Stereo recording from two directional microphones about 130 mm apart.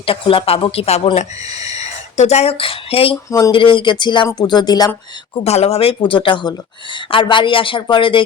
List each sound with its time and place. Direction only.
0.0 s speech: 45° left (ahead or behind)
5.4 s speech: 55° left (ahead or behind)